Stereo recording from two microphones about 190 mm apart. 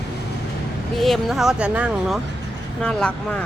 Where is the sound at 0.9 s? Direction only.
Centre (ahead or behind).